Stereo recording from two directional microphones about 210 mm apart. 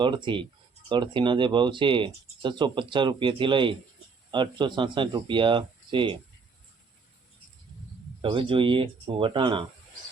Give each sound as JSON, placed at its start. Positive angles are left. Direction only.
{"t": 0.0, "sound": "speech", "side_deg": -20}
{"t": 8.2, "sound": "speech", "side_deg": -25}